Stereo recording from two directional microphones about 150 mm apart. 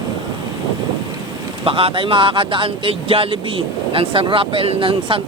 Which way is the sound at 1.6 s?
35° right (ahead or behind).